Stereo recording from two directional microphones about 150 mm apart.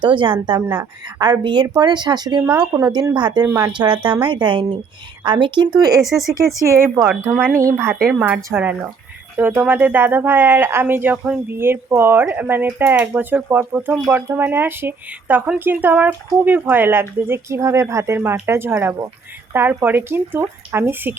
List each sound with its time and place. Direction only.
0.0 s speech: 30° right (ahead or behind)
3.8 s speech: 35° right (ahead or behind)
6.0 s speech: centre (ahead or behind)
6.6 s speech: 20° right (ahead or behind)